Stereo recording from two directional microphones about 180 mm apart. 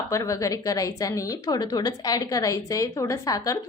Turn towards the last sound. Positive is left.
turn(degrees=20)  # may be behind; listen again after turning